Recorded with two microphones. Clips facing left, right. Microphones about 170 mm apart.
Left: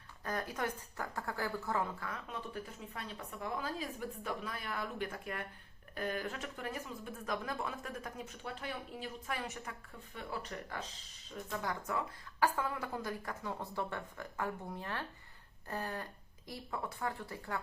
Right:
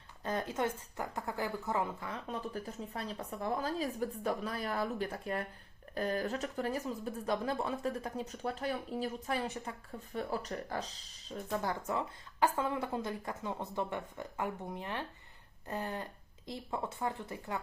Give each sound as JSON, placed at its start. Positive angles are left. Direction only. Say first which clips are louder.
{"t": 0.3, "sound": "a woman's voice", "louder": "right 4 dB", "side_deg": -25}
{"t": 2.2, "sound": "speech", "louder": "right 4 dB", "side_deg": -40}
{"t": 11.4, "sound": "a woman's voice", "louder": "right 4 dB", "side_deg": -35}